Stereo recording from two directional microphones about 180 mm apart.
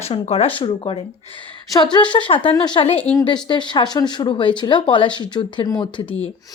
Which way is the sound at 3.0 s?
10° left (ahead or behind).